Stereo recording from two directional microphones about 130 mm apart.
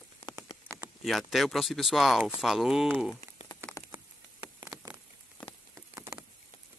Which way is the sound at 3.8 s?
25° left (ahead or behind).